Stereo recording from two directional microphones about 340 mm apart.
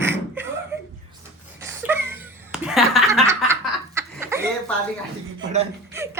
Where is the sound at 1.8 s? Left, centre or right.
Centre.